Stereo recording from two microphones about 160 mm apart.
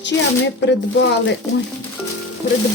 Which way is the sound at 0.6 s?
90° left.